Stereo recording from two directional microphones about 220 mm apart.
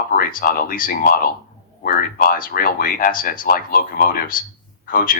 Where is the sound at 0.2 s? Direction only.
40° left (ahead or behind).